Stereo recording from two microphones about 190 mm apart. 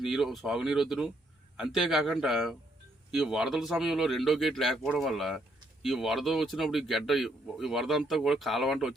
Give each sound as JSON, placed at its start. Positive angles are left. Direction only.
{"t": 0.0, "sound": "speech", "side_deg": 0}